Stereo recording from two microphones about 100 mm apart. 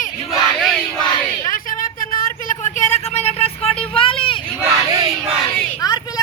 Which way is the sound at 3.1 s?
90° left.